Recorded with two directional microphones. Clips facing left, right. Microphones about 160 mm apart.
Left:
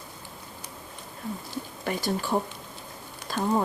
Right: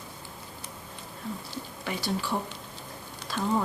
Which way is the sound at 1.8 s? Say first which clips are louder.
Left 3 dB; 45° left (ahead or behind).